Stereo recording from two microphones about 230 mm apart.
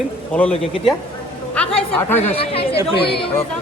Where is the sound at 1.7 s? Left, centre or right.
Centre.